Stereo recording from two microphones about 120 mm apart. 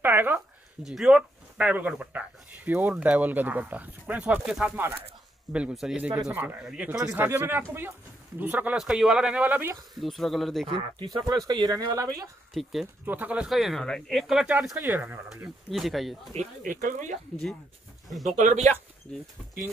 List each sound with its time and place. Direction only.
0.0 s a sound: 15° right (ahead or behind)
0.8 s speech: 5° right (ahead or behind)
7.2 s speech: 15° right (ahead or behind)
8.7 s speech: 5° right (ahead or behind)
9.9 s speech: centre (ahead or behind)
10.7 s speech: 50° right (ahead or behind)
11.1 s speech: 35° right (ahead or behind)
12.6 s speech: centre (ahead or behind)
13.0 s speech: 15° right (ahead or behind)
13.5 s speech: centre (ahead or behind)
14.4 s speech: 10° right (ahead or behind)
16.3 s speech: 85° right
18.3 s speech: 85° right
19.1 s speech: 10° left (ahead or behind)